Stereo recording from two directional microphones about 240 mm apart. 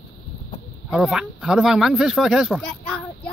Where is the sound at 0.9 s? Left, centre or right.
Centre.